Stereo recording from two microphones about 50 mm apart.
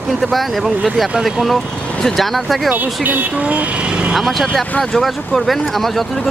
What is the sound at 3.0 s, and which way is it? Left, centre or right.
Speech, right.